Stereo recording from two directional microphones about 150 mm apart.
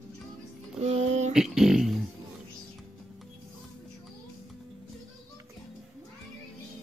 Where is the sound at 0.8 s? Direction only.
45° right (ahead or behind).